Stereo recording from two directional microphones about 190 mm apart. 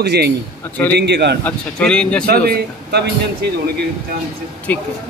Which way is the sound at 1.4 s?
5° left (ahead or behind).